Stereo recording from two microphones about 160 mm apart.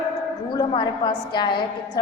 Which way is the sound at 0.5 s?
30° left (ahead or behind).